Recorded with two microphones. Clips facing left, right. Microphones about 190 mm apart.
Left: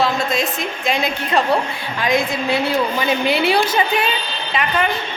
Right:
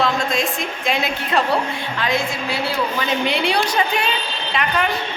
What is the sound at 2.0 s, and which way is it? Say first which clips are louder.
Speech: left 4 dB; 15° left (ahead or behind).